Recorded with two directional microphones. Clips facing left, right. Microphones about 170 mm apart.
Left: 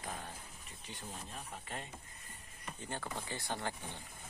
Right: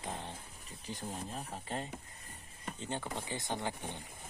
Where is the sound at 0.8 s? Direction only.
40° right (ahead or behind).